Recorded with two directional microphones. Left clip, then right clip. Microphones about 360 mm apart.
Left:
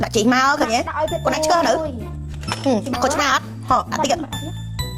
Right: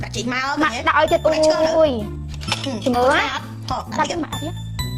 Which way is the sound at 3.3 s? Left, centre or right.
Left.